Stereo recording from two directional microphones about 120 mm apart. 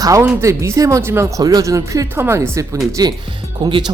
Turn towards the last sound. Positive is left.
turn(degrees=-40)  # may be behind; listen again after turning